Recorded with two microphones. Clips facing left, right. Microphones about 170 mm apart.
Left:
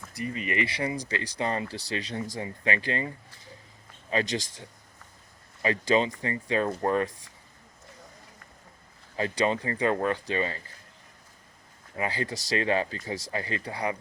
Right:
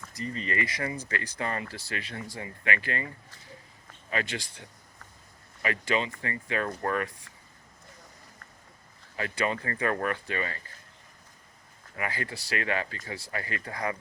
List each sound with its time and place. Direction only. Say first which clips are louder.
0.2 s speech: left 2 dB; 15° left (ahead or behind)
4.1 s speech: left 4 dB; 30° left (ahead or behind)
5.6 s speech: left 5 dB; 30° left (ahead or behind)
9.1 s speech: left 4 dB; 30° left (ahead or behind)
11.9 s speech: left 4 dB; 30° left (ahead or behind)